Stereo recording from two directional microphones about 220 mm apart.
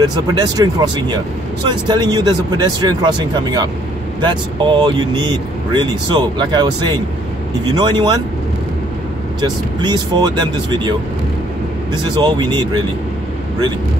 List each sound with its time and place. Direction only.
0.0 s speech: 20° right (ahead or behind)
9.4 s speech: 20° right (ahead or behind)